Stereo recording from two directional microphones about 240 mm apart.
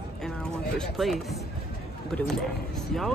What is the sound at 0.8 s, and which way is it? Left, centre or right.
Speech, centre.